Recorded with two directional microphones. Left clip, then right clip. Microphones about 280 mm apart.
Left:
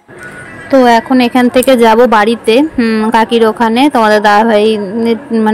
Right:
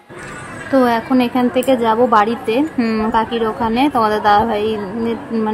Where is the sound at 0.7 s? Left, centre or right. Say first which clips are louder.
Left 7 dB; centre.